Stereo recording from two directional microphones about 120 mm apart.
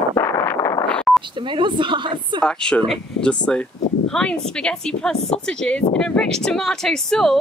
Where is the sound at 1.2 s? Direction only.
45° right (ahead or behind).